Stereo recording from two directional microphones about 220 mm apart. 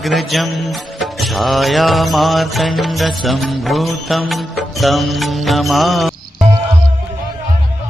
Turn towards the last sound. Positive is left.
turn(degrees=-20)  # may be behind; listen again after turning